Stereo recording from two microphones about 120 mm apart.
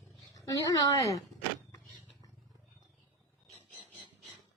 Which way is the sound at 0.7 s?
30° left (ahead or behind).